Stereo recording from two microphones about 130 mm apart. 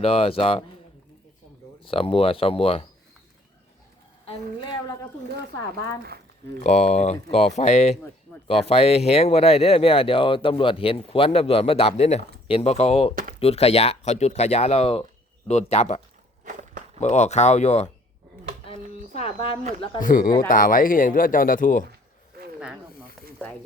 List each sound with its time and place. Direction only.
0.0 s speech: 50° left (ahead or behind)
1.8 s speech: 45° left (ahead or behind)
4.6 s a woman's voice: 35° left (ahead or behind)
6.6 s speech: 60° left (ahead or behind)
8.4 s speech: 50° left (ahead or behind)
16.4 s walk: 80° right
17.0 s speech: 60° left (ahead or behind)
19.1 s speech: 50° left (ahead or behind)
20.0 s speech: 90° left